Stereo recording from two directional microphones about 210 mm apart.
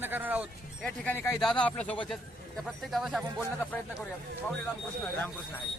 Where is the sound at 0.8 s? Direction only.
10° left (ahead or behind).